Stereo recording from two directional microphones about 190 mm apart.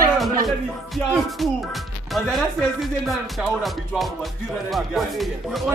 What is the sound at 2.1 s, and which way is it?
Speech, centre (ahead or behind).